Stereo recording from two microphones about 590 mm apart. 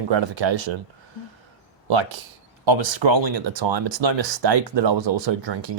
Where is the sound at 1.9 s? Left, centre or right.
Right.